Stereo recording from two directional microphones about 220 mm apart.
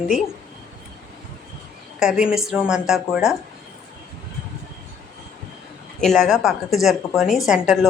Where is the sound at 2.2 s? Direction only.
Centre (ahead or behind).